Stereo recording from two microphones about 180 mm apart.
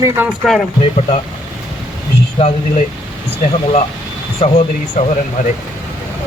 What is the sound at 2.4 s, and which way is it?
Speech, 35° left (ahead or behind).